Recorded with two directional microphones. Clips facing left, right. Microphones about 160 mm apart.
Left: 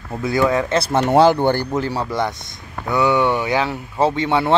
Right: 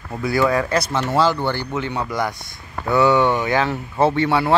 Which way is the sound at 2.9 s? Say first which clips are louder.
Right 1 dB; 15° left (ahead or behind).